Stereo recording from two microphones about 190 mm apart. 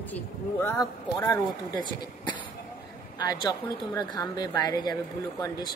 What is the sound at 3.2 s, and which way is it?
A woman's voice, 20° left (ahead or behind).